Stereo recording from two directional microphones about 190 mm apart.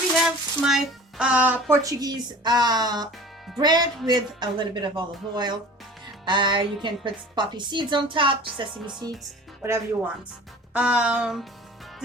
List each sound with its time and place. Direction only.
0.2 s a sound: centre (ahead or behind)
1.2 s speech: 5° right (ahead or behind)
1.8 s speech: 20° right (ahead or behind)
9.6 s speech: 15° right (ahead or behind)
10.8 s music: 5° right (ahead or behind)